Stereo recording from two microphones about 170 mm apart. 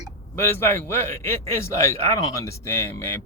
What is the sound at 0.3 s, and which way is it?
A man's voice, 15° left (ahead or behind).